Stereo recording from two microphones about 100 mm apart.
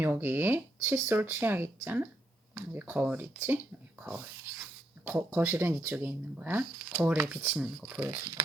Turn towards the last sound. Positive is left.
turn(degrees=-20)  # may be behind; listen again after turning